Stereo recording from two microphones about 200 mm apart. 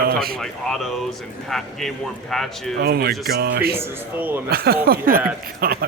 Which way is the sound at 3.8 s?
10° right (ahead or behind).